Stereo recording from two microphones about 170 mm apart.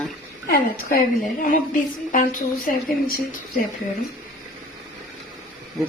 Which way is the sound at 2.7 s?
50° left (ahead or behind).